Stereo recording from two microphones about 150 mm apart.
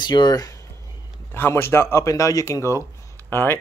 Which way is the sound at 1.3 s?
15° left (ahead or behind).